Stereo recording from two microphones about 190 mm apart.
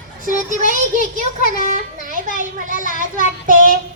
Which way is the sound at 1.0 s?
45° left (ahead or behind).